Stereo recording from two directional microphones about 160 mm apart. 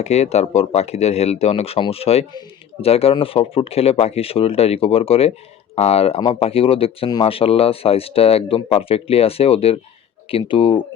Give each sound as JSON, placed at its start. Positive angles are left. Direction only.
{"t": 0.0, "sound": "speech", "side_deg": 40}